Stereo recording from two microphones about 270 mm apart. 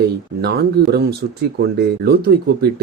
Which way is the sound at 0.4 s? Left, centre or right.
Right.